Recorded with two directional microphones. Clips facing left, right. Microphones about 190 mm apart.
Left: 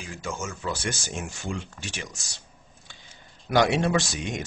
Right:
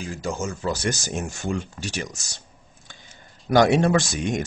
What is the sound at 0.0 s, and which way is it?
Speech, 35° right (ahead or behind).